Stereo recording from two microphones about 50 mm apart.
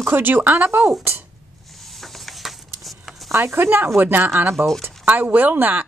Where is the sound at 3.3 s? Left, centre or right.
Right.